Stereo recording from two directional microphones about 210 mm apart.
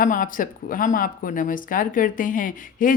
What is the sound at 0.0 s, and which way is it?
A woman's voice, 40° left (ahead or behind).